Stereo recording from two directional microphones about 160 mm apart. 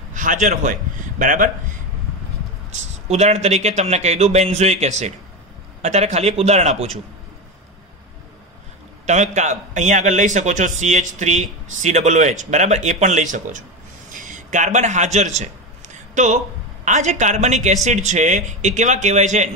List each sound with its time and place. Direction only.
0.1 s a man's voice: 55° right (ahead or behind)
2.7 s speech: 45° right (ahead or behind)
9.0 s speech: 45° right (ahead or behind)